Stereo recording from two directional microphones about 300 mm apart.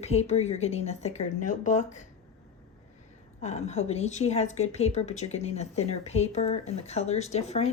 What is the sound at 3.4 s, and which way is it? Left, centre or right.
A woman's voice, left.